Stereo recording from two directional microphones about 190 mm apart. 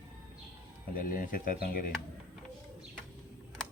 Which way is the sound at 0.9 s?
45° left (ahead or behind).